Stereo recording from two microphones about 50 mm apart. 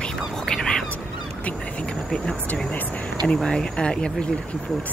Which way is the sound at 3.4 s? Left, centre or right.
Centre.